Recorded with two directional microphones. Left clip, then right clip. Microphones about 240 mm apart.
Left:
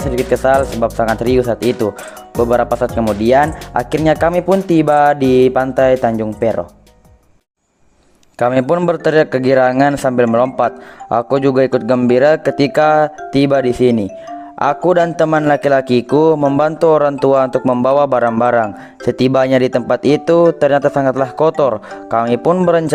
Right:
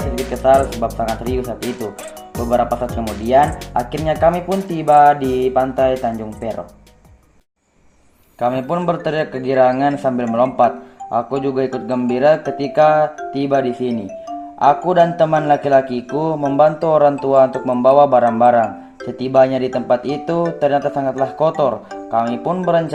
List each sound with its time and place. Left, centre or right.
0.5 s speech: centre
4.0 s speech: left
8.4 s speech: left